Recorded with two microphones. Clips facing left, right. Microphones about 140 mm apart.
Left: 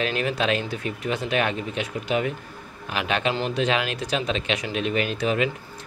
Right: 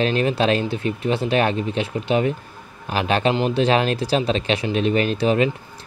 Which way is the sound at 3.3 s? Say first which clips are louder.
Right 5 dB; 20° right (ahead or behind).